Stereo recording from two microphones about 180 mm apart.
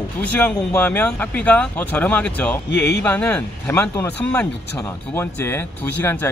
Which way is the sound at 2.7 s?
70° left (ahead or behind).